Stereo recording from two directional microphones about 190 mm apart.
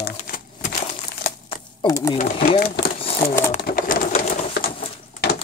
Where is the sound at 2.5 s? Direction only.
55° left (ahead or behind).